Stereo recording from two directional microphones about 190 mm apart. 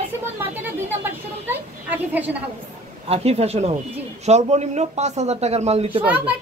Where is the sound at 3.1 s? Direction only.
35° right (ahead or behind).